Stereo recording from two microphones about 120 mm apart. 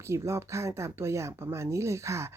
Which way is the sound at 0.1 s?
25° right (ahead or behind).